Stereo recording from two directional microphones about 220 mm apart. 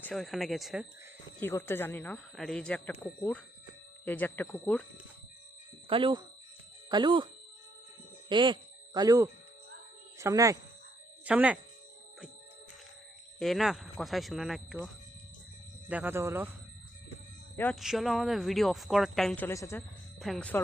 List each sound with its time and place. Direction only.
0.0 s speech: centre (ahead or behind)
1.4 s speech: 10° left (ahead or behind)
5.9 s speech: 20° right (ahead or behind)
8.3 s speech: 20° right (ahead or behind); by 11.5 s 5° right (ahead or behind)
13.4 s speech: centre (ahead or behind)
15.9 s speech: 10° right (ahead or behind)
17.6 s speech: centre (ahead or behind)
20.1 s speech: centre (ahead or behind)